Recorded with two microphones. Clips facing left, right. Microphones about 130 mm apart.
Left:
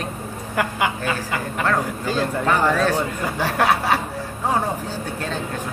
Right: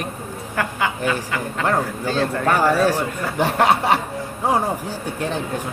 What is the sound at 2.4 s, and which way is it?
Speech, 10° right (ahead or behind).